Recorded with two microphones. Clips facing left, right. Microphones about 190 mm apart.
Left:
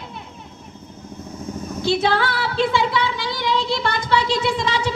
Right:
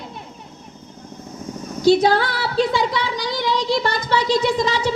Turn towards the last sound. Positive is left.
turn(degrees=-40)  # may be behind; listen again after turning